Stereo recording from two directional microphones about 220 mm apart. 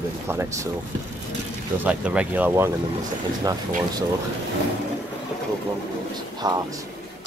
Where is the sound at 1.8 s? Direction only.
5° right (ahead or behind).